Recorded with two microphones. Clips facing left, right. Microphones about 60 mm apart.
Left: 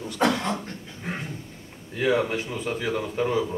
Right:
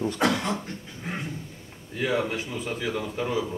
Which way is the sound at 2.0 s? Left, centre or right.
Centre.